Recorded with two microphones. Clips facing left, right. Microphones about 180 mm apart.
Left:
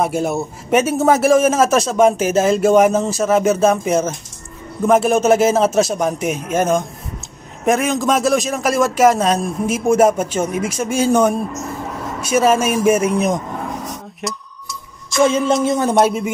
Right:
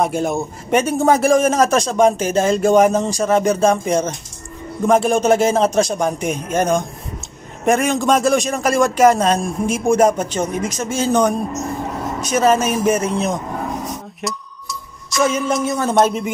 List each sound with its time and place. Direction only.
0.0 s a man's voice: 5° left (ahead or behind)
14.2 s a man's voice: centre (ahead or behind)
15.1 s a sound: 25° left (ahead or behind)